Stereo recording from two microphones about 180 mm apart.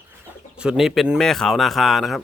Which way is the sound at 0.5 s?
5° right (ahead or behind).